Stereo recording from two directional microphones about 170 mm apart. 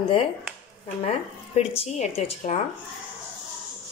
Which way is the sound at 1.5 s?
35° left (ahead or behind).